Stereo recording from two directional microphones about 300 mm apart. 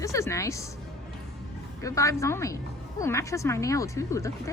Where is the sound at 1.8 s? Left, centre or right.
Centre.